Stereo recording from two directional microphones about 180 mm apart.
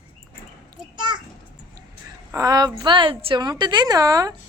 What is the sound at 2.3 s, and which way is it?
A woman's voice, 20° right (ahead or behind).